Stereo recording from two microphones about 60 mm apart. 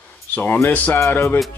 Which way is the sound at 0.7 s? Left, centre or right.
Left.